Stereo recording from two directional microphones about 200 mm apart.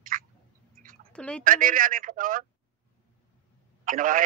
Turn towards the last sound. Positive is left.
turn(degrees=-45)  # may be behind; listen again after turning